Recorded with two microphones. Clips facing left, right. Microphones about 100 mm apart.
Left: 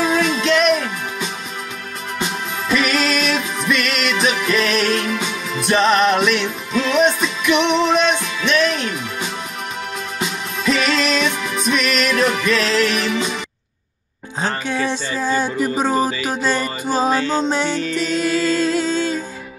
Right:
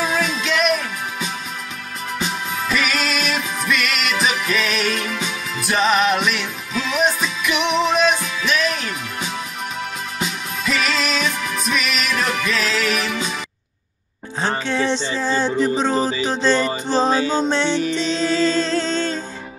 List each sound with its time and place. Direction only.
0.0 s music: centre (ahead or behind)
14.7 s music: 10° left (ahead or behind)
17.1 s music: 15° right (ahead or behind)
17.5 s music: 10° left (ahead or behind)
17.7 s music: 25° right (ahead or behind)
18.1 s music: 10° left (ahead or behind)